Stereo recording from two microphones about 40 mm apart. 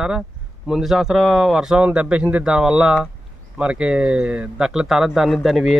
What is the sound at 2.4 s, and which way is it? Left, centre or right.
Speech, centre.